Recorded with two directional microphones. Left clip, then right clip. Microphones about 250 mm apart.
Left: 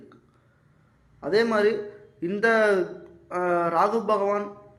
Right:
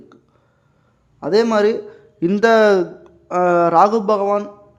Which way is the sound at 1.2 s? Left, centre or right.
Right.